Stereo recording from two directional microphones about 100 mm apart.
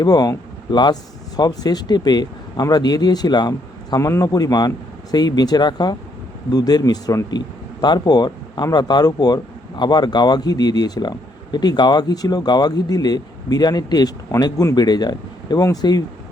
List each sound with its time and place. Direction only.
0.0 s speech: 40° left (ahead or behind)